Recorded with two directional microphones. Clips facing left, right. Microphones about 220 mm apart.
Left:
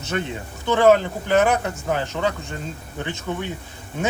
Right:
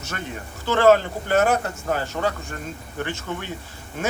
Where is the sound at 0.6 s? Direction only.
15° left (ahead or behind).